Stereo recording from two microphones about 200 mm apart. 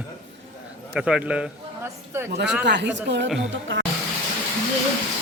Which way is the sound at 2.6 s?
60° right (ahead or behind).